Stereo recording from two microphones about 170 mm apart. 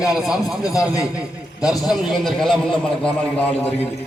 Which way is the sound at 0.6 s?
20° left (ahead or behind).